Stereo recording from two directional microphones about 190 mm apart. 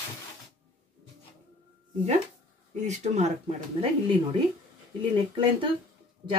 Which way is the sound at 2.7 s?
35° right (ahead or behind).